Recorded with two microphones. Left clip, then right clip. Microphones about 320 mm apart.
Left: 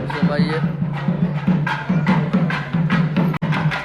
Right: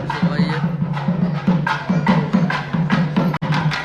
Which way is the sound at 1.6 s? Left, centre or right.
Right.